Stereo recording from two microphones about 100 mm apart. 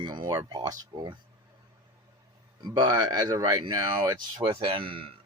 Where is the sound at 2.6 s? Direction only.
45° right (ahead or behind); by 5.1 s 65° right (ahead or behind).